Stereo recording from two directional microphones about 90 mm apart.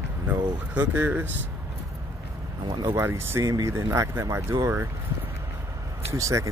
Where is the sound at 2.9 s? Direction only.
25° right (ahead or behind).